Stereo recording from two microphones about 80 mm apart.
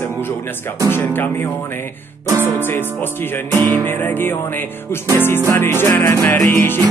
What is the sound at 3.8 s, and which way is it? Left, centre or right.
Music, left.